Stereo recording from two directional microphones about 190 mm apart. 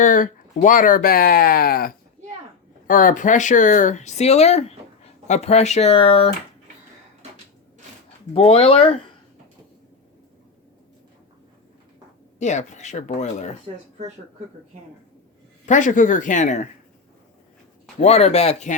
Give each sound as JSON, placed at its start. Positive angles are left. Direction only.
{"t": 0.0, "sound": "speech", "side_deg": 45}
{"t": 8.3, "sound": "speech", "side_deg": 30}
{"t": 12.4, "sound": "speech", "side_deg": 40}
{"t": 15.6, "sound": "speech", "side_deg": 40}
{"t": 18.0, "sound": "speech", "side_deg": 35}